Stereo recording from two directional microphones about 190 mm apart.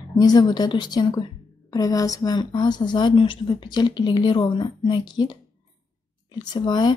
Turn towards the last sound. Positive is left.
turn(degrees=25)  # may be behind; listen again after turning